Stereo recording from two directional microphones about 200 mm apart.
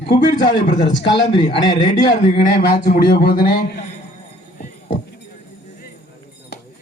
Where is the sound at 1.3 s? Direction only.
25° left (ahead or behind).